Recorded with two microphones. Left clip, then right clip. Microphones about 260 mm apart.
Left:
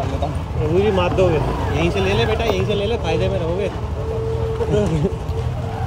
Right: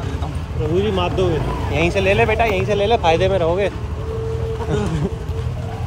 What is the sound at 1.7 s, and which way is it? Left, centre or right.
Speech, centre.